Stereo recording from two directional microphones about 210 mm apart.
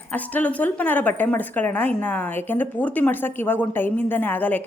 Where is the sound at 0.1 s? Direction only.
10° left (ahead or behind).